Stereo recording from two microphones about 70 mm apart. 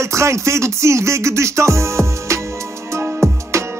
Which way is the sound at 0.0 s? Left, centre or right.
Right.